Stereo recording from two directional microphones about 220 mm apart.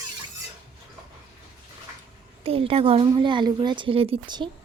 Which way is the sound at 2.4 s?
25° right (ahead or behind).